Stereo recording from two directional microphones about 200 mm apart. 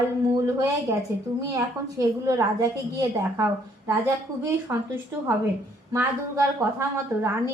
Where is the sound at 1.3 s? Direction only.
15° right (ahead or behind).